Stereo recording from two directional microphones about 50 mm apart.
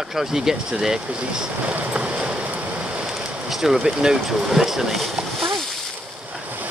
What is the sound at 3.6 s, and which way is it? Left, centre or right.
Speech, centre.